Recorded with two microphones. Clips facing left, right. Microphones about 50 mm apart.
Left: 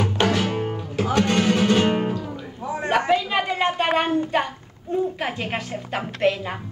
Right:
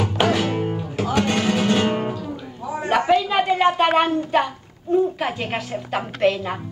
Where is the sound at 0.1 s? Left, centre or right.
Centre.